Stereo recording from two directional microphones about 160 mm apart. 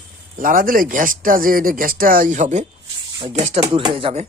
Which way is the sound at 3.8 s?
30° right (ahead or behind).